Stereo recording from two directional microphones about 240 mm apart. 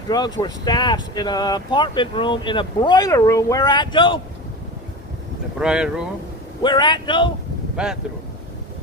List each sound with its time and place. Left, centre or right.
0.1 s speech: centre
5.5 s speech: centre
6.6 s speech: centre
7.8 s speech: centre